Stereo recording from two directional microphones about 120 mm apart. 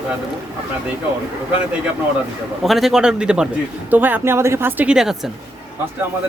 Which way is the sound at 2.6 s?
Centre (ahead or behind).